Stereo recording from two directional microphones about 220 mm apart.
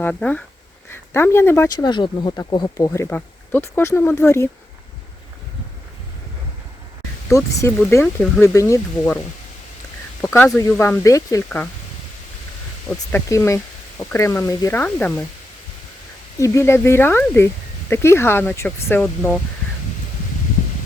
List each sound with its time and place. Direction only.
0.0 s speech: 5° left (ahead or behind)
7.3 s speech: 15° left (ahead or behind)
8.5 s speech: 15° left (ahead or behind)
10.2 s speech: 10° left (ahead or behind)
13.1 s speech: 10° left (ahead or behind)
16.4 s speech: 10° left (ahead or behind)